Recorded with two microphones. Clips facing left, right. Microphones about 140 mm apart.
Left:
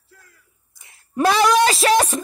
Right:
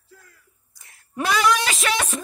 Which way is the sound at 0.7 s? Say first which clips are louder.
Left 1 dB; 20° left (ahead or behind).